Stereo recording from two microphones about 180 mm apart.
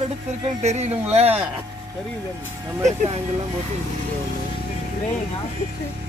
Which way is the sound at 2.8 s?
40° right (ahead or behind).